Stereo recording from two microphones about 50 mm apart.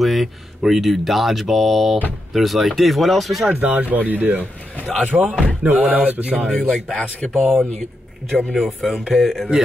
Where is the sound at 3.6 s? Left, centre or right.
Right.